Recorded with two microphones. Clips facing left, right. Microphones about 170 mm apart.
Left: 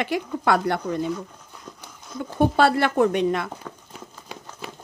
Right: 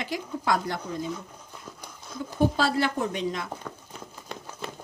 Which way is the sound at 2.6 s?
60° left (ahead or behind).